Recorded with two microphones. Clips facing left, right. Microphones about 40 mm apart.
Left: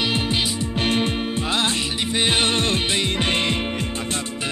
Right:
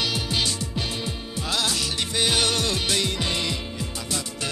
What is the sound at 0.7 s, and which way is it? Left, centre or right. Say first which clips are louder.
Music: left 9 dB; left.